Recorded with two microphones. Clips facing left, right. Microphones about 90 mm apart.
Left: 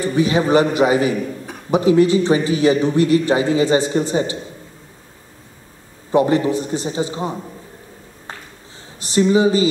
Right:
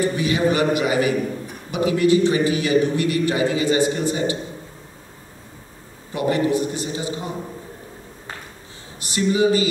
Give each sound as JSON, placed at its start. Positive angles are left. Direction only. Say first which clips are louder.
{"t": 0.1, "sound": "a man's voice", "louder": "left 5 dB", "side_deg": 30}
{"t": 6.1, "sound": "a man's voice", "louder": "left 4 dB", "side_deg": 30}
{"t": 9.0, "sound": "a man's voice", "louder": "left 4 dB", "side_deg": 30}